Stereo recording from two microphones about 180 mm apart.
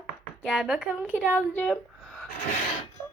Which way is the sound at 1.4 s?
10° left (ahead or behind).